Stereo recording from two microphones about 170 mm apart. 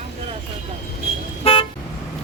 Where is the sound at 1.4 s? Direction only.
35° left (ahead or behind).